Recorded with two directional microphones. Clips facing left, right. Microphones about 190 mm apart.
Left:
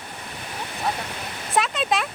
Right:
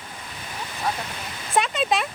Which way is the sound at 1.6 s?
Centre (ahead or behind).